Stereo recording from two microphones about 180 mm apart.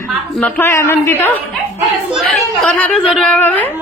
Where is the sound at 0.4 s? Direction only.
10° left (ahead or behind).